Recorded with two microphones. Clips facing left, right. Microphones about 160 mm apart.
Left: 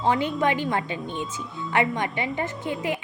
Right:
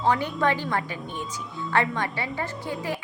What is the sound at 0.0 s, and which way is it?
A woman's voice, 20° left (ahead or behind).